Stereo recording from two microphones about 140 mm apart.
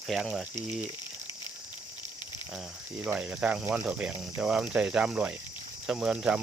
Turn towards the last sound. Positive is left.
turn(degrees=-5)  # may be behind; listen again after turning